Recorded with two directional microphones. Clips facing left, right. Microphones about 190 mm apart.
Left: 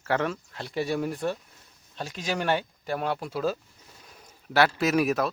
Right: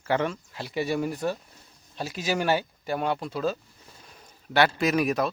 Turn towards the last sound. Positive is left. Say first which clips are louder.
# even
turn(degrees=0)  # may be behind; listen again after turning